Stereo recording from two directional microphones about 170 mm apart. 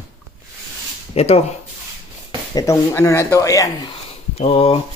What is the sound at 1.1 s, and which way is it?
Speech, 35° left (ahead or behind).